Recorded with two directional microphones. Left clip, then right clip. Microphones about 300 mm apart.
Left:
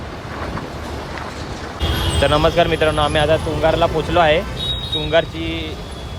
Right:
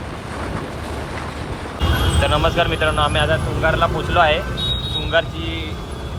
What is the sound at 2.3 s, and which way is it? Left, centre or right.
Speech, left.